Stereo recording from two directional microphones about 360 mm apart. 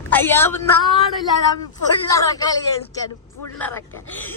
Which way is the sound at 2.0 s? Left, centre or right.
Centre.